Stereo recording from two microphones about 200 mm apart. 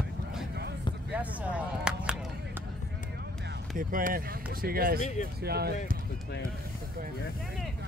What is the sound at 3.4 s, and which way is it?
Speech, 45° right (ahead or behind).